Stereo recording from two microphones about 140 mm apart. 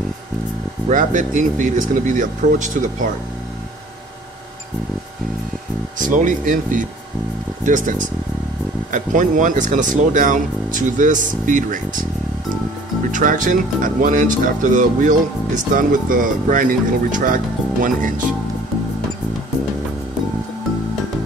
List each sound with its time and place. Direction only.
0.8 s speech: 65° right (ahead or behind)
5.9 s speech: 70° right (ahead or behind)
8.9 s speech: 65° right (ahead or behind)
13.1 s speech: 70° right (ahead or behind)